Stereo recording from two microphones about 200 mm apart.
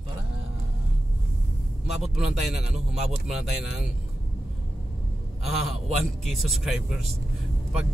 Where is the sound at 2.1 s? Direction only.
5° right (ahead or behind).